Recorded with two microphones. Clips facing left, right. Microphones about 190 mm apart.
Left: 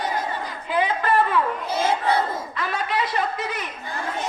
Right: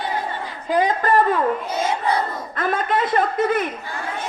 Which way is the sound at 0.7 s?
40° right (ahead or behind).